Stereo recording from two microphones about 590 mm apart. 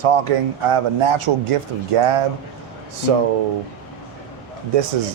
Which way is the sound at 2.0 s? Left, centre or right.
Right.